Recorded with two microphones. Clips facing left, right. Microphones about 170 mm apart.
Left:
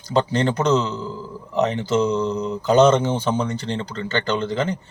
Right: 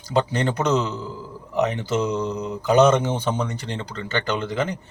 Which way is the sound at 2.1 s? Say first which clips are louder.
Left 3 dB; 15° right (ahead or behind).